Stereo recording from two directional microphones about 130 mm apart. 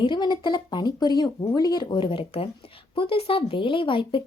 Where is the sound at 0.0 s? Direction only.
40° left (ahead or behind).